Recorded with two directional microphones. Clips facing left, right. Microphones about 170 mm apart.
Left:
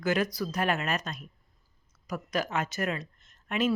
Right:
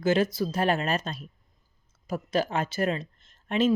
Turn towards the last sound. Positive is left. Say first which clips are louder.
# right 4 dB
turn(degrees=-30)  # may be behind; listen again after turning